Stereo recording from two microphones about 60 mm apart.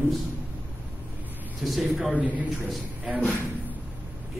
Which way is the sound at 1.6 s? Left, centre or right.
Centre.